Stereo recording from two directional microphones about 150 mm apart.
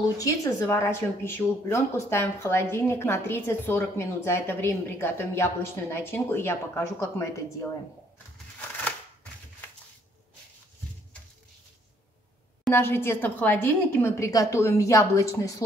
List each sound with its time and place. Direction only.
0.2 s a woman's voice: 20° left (ahead or behind)
12.6 s a woman's voice: 15° left (ahead or behind)